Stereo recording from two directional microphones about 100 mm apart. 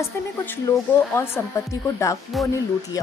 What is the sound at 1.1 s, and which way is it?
Speech, 25° left (ahead or behind).